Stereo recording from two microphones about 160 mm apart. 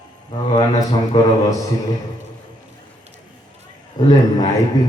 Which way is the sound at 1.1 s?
30° left (ahead or behind).